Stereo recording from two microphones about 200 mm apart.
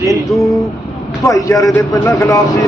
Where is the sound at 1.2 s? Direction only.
15° left (ahead or behind).